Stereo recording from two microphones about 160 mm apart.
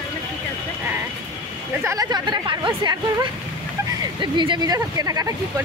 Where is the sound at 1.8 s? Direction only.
20° right (ahead or behind).